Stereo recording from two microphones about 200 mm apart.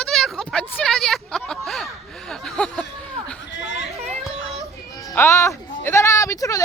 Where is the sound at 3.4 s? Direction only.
65° left (ahead or behind).